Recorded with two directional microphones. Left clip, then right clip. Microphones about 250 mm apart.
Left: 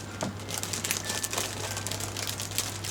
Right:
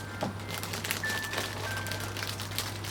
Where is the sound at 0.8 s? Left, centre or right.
Centre.